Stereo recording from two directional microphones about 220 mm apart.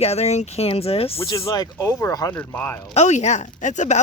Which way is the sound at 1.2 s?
15° left (ahead or behind).